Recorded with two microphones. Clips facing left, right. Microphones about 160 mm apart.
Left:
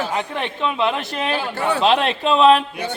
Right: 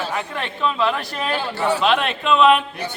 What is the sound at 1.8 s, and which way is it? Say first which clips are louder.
Speech: left 2 dB; 30° left (ahead or behind).